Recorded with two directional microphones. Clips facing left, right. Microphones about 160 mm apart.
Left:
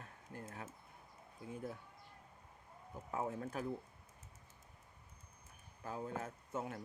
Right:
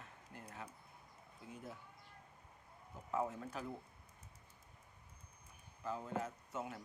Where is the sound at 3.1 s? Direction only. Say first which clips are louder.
Right 1 dB; 50° left (ahead or behind).